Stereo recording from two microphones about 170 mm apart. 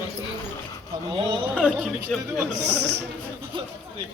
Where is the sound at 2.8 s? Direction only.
80° right.